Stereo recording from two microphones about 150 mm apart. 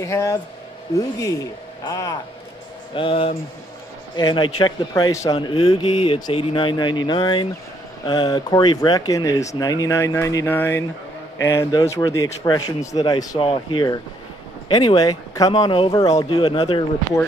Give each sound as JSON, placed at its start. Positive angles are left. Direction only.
{"t": 0.0, "sound": "speech", "side_deg": 20}
{"t": 1.9, "sound": "speech", "side_deg": 25}
{"t": 2.9, "sound": "speech", "side_deg": 35}
{"t": 5.3, "sound": "speech", "side_deg": 35}